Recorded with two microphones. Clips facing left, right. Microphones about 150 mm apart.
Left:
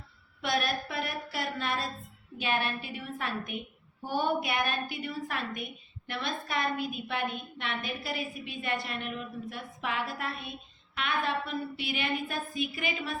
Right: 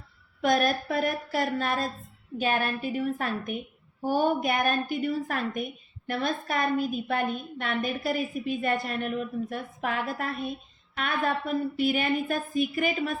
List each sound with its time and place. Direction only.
0.4 s a woman's voice: 45° right (ahead or behind)